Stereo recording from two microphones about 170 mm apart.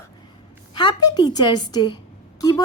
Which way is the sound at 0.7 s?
25° left (ahead or behind).